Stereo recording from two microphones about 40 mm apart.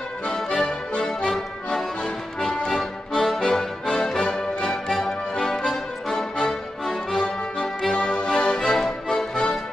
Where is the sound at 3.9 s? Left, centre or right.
Centre.